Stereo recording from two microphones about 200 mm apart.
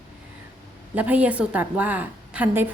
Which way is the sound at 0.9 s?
5° right (ahead or behind).